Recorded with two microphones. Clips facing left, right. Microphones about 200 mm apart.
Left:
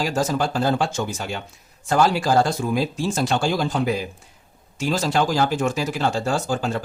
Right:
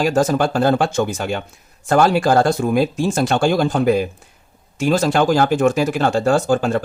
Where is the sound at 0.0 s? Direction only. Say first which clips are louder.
Right 6 dB; 55° right (ahead or behind).